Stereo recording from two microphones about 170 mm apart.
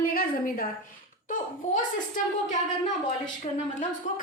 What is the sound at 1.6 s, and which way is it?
Speech, 45° left (ahead or behind).